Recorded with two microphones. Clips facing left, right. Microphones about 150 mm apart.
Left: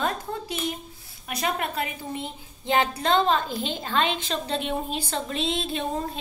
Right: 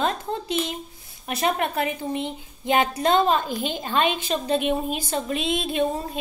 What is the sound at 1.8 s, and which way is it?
A woman's voice, 20° right (ahead or behind).